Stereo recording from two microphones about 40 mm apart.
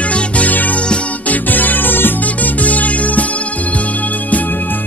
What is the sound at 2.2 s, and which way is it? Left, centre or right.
Music, left.